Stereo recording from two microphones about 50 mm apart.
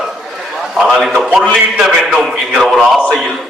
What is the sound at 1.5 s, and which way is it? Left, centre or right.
A man's voice, centre.